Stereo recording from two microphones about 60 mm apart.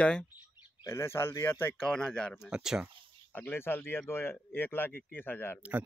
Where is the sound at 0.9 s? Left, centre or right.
Left.